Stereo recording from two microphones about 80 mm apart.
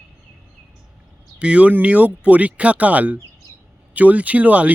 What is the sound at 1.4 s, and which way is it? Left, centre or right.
Speech, centre.